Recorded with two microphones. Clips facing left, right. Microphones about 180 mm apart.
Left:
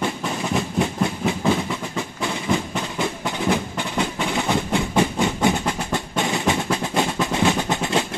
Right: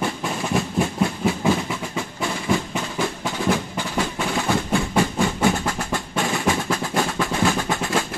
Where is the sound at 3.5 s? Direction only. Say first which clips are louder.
Even; 20° left (ahead or behind).